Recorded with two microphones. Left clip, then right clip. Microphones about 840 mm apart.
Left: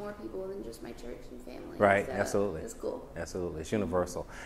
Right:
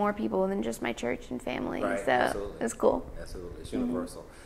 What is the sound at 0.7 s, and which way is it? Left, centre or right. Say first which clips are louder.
Speech: right 12 dB; right.